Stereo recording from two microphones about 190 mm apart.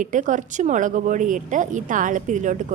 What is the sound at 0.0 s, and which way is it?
A woman's voice, 40° right (ahead or behind).